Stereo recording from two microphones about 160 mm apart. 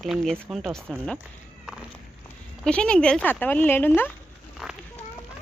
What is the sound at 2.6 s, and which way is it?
Speech, 5° left (ahead or behind).